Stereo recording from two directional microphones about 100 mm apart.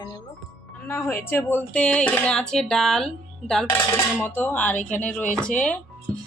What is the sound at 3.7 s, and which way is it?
Dishes, 20° left (ahead or behind).